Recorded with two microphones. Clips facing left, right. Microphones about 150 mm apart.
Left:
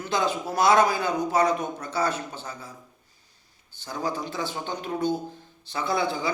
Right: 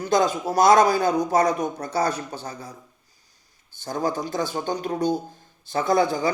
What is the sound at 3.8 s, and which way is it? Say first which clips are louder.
A man's voice: right 4 dB; 45° right (ahead or behind).